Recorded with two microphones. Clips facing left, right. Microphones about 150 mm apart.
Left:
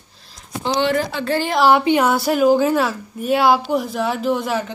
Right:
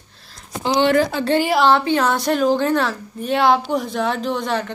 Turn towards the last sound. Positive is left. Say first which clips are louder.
# left 2 dB
turn(degrees=5)  # may be behind; listen again after turning